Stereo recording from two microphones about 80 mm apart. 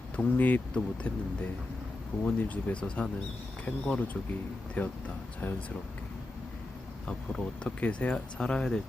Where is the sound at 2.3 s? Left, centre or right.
Centre.